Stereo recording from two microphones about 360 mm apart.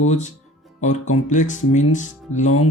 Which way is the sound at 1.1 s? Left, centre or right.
Left.